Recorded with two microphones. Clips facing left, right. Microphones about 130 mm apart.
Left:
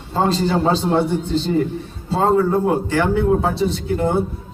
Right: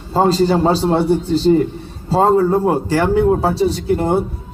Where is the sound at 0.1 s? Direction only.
35° right (ahead or behind).